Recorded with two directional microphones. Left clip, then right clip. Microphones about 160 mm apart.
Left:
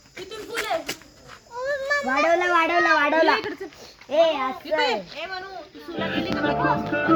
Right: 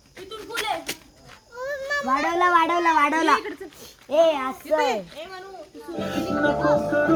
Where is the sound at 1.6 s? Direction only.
30° right (ahead or behind).